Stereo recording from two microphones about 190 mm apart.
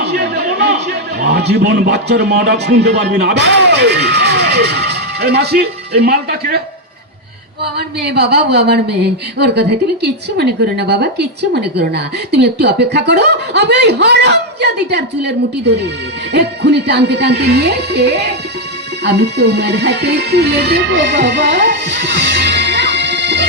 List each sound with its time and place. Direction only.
0.0 s a sound: 60° right (ahead or behind)
1.2 s a woman's voice: 60° right (ahead or behind)
7.8 s a woman's voice: 60° right (ahead or behind)